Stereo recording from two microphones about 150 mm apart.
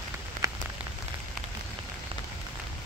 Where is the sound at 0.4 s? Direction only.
60° right (ahead or behind).